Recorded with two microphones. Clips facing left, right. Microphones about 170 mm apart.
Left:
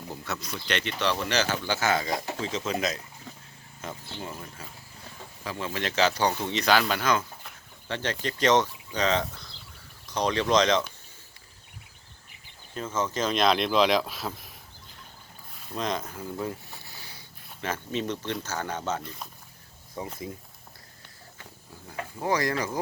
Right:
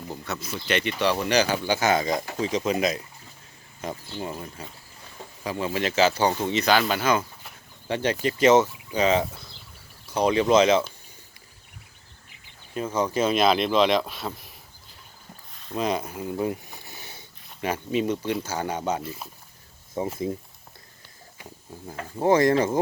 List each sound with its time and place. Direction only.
0.1 s speech: centre (ahead or behind)
5.5 s speech: 15° right (ahead or behind)
12.7 s speech: 10° right (ahead or behind)
15.5 s a sound: 5° right (ahead or behind); by 17.2 s 20° right (ahead or behind)
17.6 s speech: 10° right (ahead or behind)
20.0 s speech: 25° right (ahead or behind)
21.8 s speech: 25° right (ahead or behind)